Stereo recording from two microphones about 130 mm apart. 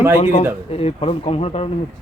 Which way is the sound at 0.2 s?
55° left (ahead or behind).